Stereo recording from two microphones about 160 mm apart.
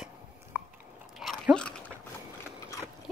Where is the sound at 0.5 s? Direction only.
15° right (ahead or behind).